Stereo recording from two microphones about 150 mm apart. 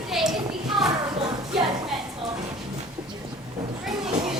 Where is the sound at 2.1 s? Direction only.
30° right (ahead or behind).